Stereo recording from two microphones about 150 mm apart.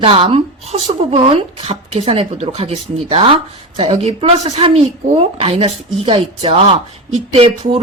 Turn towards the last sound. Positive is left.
turn(degrees=-40)  # may be behind; listen again after turning